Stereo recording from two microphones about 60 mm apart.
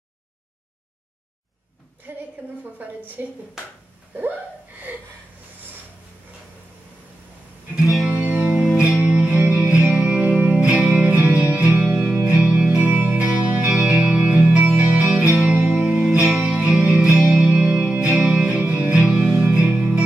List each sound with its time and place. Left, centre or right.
2.1 s a sound: right
3.2 s speech: right
7.8 s music: centre
8.1 s music: centre